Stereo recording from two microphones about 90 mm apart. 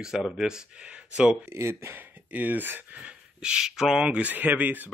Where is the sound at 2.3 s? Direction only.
20° right (ahead or behind).